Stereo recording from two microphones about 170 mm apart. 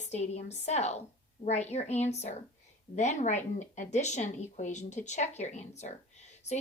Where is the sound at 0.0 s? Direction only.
40° left (ahead or behind).